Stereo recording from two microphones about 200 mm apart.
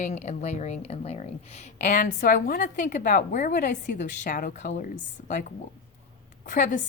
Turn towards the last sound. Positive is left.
turn(degrees=40)  # may be behind; listen again after turning